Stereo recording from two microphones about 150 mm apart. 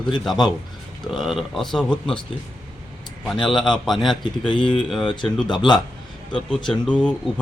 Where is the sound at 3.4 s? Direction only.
5° left (ahead or behind).